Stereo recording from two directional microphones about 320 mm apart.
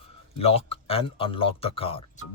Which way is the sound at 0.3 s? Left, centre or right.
Centre.